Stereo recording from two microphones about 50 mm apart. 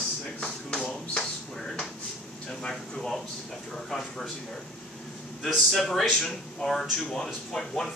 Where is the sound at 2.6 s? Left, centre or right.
Centre.